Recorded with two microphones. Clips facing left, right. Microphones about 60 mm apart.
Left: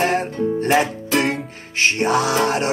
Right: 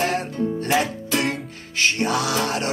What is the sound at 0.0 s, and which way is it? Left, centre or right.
Music, left.